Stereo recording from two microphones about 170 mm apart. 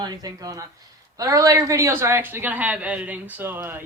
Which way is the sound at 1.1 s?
20° right (ahead or behind).